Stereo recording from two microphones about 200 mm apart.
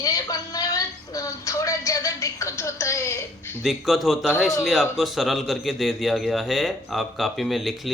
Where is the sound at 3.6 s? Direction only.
Centre (ahead or behind).